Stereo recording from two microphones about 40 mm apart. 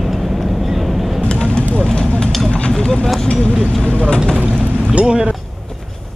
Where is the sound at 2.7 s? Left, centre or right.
Centre.